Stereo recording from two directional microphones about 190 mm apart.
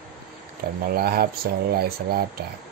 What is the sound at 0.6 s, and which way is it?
Speech, 55° right (ahead or behind).